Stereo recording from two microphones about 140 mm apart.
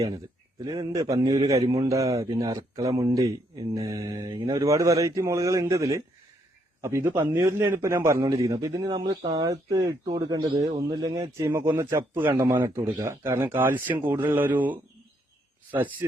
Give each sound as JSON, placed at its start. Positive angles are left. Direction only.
{"t": 0.6, "sound": "speech", "side_deg": -25}